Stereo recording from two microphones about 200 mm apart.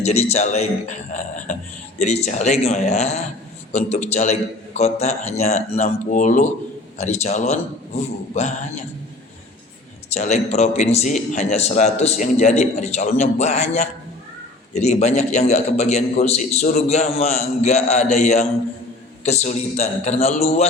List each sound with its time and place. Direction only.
0.0 s a man's voice: 30° left (ahead or behind)
10.1 s a man's voice: 35° left (ahead or behind)